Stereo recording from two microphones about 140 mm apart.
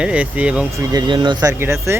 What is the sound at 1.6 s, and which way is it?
Speech, 20° right (ahead or behind).